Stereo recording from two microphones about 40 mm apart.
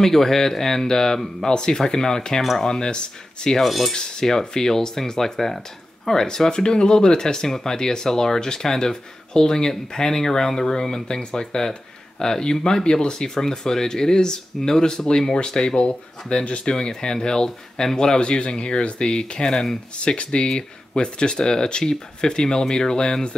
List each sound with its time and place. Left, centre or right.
0.0 s speech: centre
3.5 s speech: centre
3.9 s speech: centre